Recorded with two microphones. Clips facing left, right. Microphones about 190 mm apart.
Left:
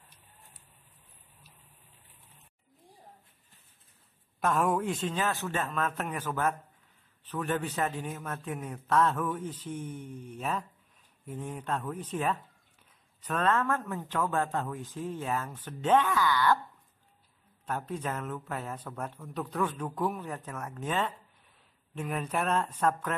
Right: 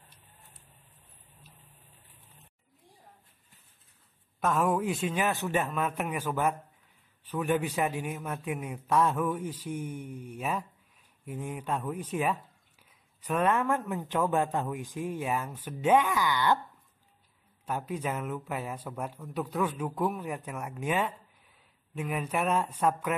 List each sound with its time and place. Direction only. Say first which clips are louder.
4.4 s speech: right 1 dB; centre (ahead or behind); by 16.5 s 15° right (ahead or behind)
17.6 s speech: right 1 dB; 10° right (ahead or behind)